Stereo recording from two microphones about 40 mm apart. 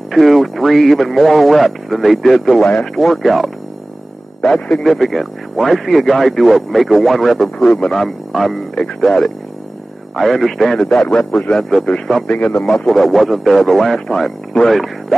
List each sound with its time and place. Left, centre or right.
0.1 s speech: centre
4.8 s speech: centre
7.5 s speech: centre
12.7 s speech: centre
14.0 s speech: centre
14.7 s speech: centre